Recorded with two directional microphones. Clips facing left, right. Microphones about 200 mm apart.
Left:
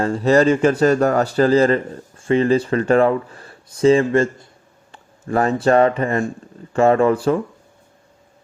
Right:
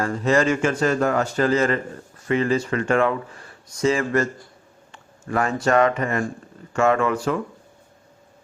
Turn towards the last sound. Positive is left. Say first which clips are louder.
# left 6 dB
turn(degrees=30)  # may be behind; listen again after turning